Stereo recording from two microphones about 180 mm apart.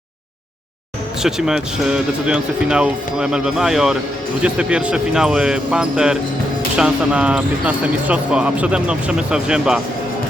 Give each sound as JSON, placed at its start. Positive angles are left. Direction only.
{"t": 1.2, "sound": "speech", "side_deg": -5}